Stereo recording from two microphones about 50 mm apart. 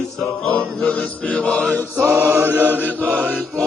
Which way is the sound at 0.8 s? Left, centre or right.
Centre.